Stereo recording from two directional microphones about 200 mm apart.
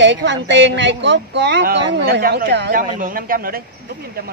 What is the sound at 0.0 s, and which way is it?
Speech, 65° right (ahead or behind).